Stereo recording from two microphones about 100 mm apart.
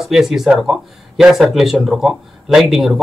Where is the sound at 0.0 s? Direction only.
5° right (ahead or behind).